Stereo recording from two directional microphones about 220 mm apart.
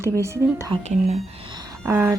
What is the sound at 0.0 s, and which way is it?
Speech, 10° right (ahead or behind).